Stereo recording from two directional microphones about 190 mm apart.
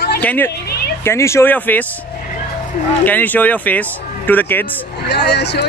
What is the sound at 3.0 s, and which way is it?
Speech, 10° left (ahead or behind).